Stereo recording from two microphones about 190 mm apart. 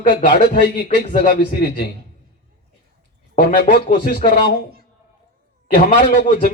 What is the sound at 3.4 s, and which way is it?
Speech, 50° left (ahead or behind).